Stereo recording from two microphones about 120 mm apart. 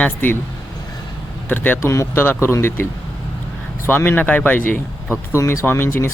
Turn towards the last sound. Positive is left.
turn(degrees=20)  # may be behind; listen again after turning